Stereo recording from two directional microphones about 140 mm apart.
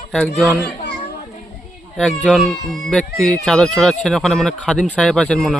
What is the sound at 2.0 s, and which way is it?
Speech, 5° left (ahead or behind).